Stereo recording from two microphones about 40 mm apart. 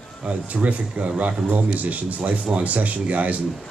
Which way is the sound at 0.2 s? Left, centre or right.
Right.